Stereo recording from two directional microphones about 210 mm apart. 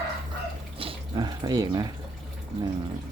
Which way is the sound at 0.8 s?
25° right (ahead or behind).